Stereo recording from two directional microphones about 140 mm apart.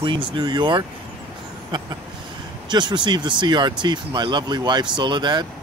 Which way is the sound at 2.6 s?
35° right (ahead or behind).